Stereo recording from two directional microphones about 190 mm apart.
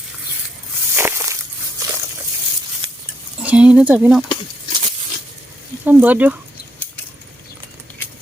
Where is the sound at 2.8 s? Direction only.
25° right (ahead or behind).